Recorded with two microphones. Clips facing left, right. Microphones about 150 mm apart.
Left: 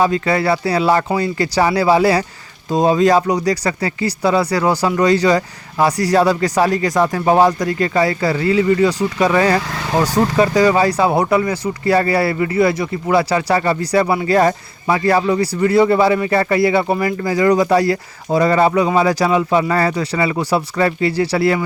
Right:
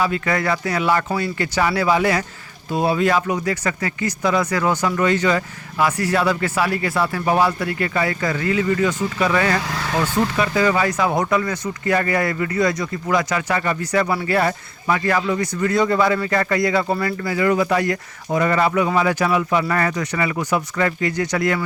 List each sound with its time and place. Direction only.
0.0 s speech: 30° left (ahead or behind)
14.3 s speech: 35° left (ahead or behind); by 17.2 s 15° left (ahead or behind)
17.2 s speech: 35° left (ahead or behind)